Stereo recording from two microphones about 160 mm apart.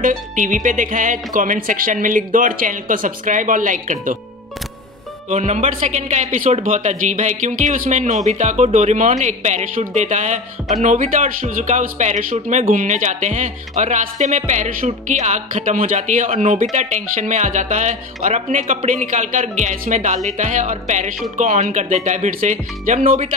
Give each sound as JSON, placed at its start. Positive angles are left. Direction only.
{"t": 0.0, "sound": "speech", "side_deg": -55}
{"t": 5.3, "sound": "a man's voice", "side_deg": -45}